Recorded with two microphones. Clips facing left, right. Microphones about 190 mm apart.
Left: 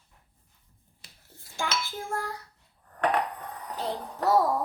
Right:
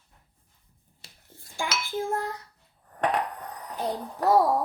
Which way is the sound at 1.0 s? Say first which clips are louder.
Right 2 dB; 30° right (ahead or behind).